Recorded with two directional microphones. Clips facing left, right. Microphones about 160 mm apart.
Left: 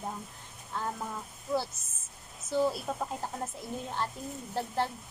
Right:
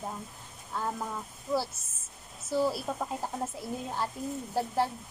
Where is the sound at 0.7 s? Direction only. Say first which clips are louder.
Right 1 dB; 5° right (ahead or behind).